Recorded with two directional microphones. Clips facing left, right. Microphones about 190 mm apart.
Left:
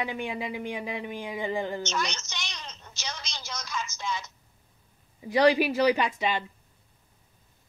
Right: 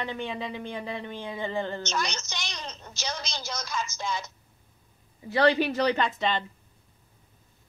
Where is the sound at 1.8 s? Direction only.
35° right (ahead or behind).